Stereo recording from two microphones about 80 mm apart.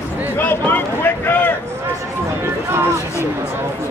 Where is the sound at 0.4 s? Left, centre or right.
Left.